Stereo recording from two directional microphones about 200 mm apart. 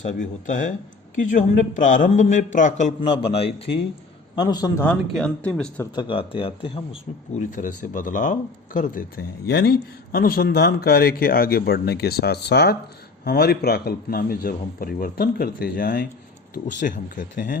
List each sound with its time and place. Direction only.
0.2 s a man's voice: 40° left (ahead or behind); by 5.9 s 5° left (ahead or behind)
5.9 s speech: 25° left (ahead or behind)
7.3 s a man's voice: 40° left (ahead or behind)